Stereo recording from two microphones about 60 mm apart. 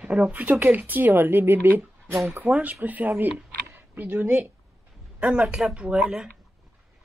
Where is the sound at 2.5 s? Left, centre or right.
Right.